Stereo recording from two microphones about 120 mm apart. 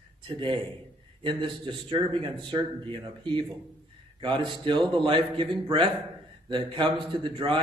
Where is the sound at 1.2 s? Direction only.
45° right (ahead or behind).